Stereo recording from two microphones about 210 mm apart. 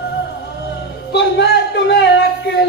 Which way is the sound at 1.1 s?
55° left (ahead or behind).